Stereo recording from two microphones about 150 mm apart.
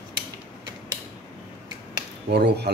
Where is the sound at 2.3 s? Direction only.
90° right.